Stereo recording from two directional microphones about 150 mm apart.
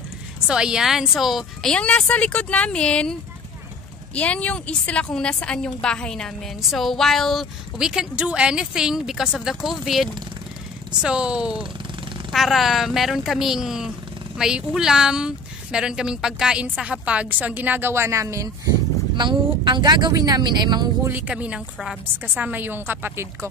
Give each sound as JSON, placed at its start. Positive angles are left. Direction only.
{"t": 0.5, "sound": "a woman's voice", "side_deg": -5}
{"t": 21.1, "sound": "a woman's voice", "side_deg": -10}